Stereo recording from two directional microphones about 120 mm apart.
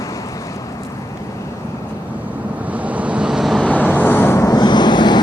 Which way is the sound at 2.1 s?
15° right (ahead or behind).